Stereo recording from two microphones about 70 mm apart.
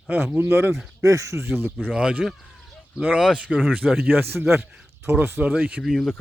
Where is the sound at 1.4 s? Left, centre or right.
Right.